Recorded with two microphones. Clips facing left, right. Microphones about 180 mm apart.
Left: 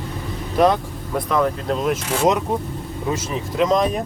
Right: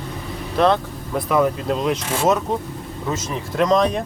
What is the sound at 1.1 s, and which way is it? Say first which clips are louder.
Speech: right 1 dB; 5° right (ahead or behind).